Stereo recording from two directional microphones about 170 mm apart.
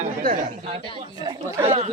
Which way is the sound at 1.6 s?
35° right (ahead or behind).